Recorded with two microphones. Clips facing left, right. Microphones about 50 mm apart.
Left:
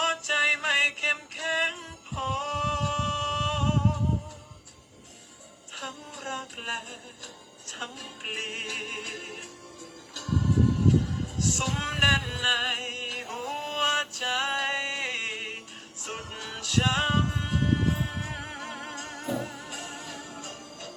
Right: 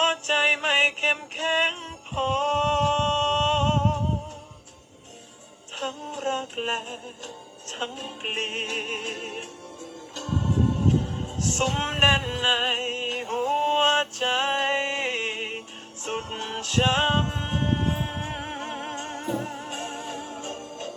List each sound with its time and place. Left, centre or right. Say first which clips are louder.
0.0 s music: right 3 dB; right
5.7 s music: right 7 dB; right